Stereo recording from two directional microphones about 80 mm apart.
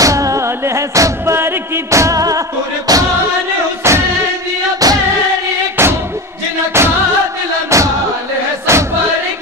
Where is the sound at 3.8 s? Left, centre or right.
Right.